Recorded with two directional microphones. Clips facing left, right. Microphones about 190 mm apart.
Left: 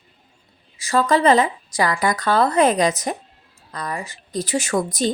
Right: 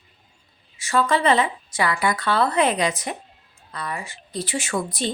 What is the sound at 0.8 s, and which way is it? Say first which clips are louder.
A woman's voice: left 3 dB; 40° left (ahead or behind).